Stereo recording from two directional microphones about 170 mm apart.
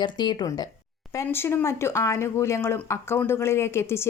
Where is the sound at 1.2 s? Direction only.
15° left (ahead or behind).